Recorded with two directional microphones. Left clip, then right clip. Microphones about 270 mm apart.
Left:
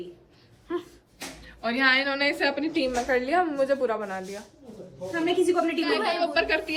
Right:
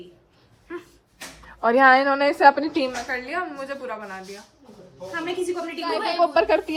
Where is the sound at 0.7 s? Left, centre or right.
Centre.